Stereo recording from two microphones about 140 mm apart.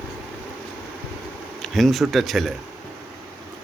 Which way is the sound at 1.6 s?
Centre (ahead or behind).